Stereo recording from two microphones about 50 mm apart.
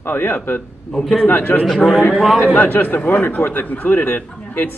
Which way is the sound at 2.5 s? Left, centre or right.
Left.